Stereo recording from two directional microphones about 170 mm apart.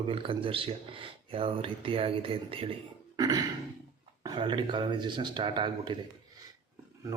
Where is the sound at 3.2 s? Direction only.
25° right (ahead or behind).